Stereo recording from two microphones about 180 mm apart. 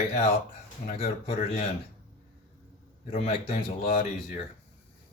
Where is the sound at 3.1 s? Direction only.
35° left (ahead or behind).